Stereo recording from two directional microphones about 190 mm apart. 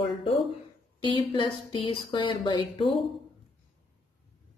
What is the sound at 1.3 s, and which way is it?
A woman's voice, 25° left (ahead or behind).